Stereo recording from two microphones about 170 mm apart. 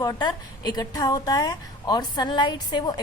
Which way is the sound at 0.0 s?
25° left (ahead or behind).